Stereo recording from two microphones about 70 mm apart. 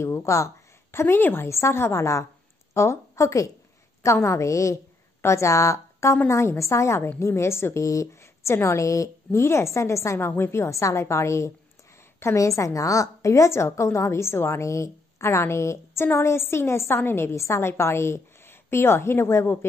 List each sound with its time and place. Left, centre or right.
0.0 s speech: left
0.9 s a woman's voice: left